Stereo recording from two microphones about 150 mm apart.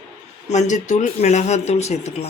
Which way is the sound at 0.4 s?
55° left (ahead or behind).